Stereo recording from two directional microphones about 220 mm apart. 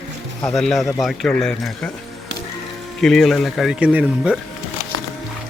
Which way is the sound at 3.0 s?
Centre (ahead or behind).